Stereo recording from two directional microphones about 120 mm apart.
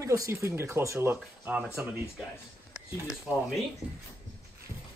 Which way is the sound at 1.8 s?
5° right (ahead or behind).